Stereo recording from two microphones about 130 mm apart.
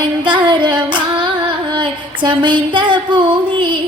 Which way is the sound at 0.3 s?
35° right (ahead or behind).